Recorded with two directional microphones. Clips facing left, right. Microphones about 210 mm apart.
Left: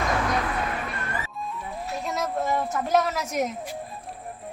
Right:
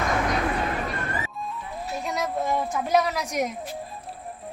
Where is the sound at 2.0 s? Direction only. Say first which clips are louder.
Even; centre (ahead or behind).